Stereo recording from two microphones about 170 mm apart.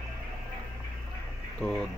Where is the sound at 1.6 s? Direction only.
5° left (ahead or behind).